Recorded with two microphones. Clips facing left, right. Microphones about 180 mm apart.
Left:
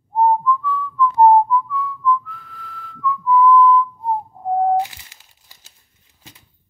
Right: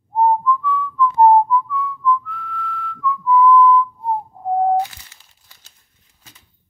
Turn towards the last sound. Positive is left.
turn(degrees=15)  # may be behind; listen again after turning